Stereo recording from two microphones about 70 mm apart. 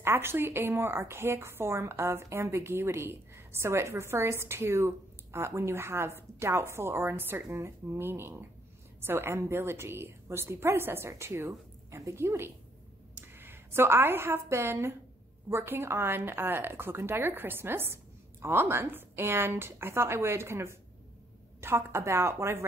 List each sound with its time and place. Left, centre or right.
0.0 s a woman's voice: right